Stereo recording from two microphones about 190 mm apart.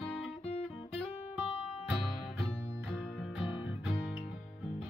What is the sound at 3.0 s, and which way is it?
Music, centre (ahead or behind).